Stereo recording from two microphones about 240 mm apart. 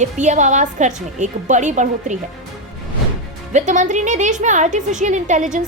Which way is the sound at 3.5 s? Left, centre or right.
Right.